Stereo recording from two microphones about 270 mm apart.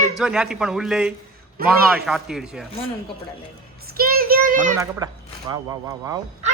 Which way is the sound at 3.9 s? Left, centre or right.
Right.